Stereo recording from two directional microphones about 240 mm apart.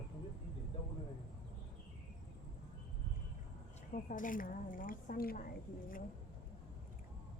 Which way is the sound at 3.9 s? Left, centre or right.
Left.